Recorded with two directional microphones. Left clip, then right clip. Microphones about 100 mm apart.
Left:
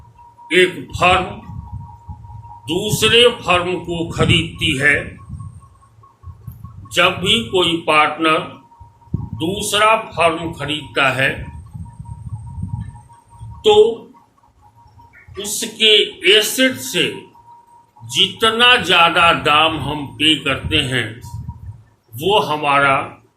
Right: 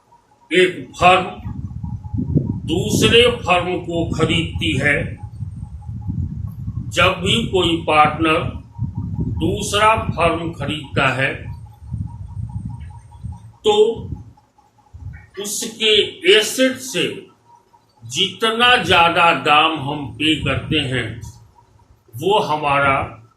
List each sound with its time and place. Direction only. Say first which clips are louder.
0.4 s a man's voice: left 1 dB; 30° left (ahead or behind)
2.6 s a man's voice: left 2 dB; 35° left (ahead or behind)
6.9 s a man's voice: left 2 dB; 50° left (ahead or behind)
7.5 s speech: right 1 dB; 25° left (ahead or behind)
9.6 s speech: left 1 dB; 15° left (ahead or behind)
13.6 s speech: left 4 dB; 20° left (ahead or behind)
15.4 s speech: left 4 dB; 20° left (ahead or behind)
18.1 s speech: left 4 dB; 20° left (ahead or behind)
22.2 s speech: left 1 dB; 15° left (ahead or behind)